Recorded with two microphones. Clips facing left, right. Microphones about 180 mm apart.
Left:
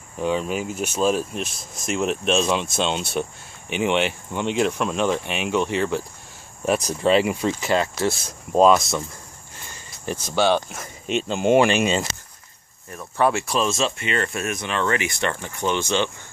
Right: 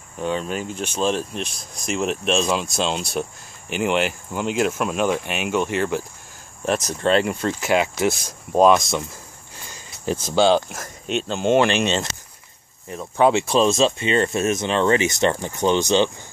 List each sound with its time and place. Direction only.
0.2 s speech: 5° left (ahead or behind)
7.7 s speech: 15° right (ahead or behind)
8.6 s speech: centre (ahead or behind)
10.2 s speech: 15° right (ahead or behind)
10.7 s speech: centre (ahead or behind)
12.9 s speech: 20° right (ahead or behind); by 16.1 s 35° right (ahead or behind)